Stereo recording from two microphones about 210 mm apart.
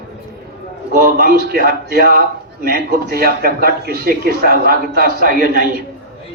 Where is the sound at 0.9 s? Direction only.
45° right (ahead or behind).